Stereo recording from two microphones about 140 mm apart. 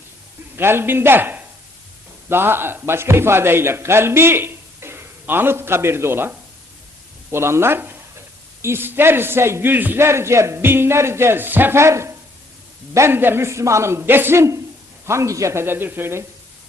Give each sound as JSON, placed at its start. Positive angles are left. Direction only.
{"t": 0.5, "sound": "a man's voice", "side_deg": -15}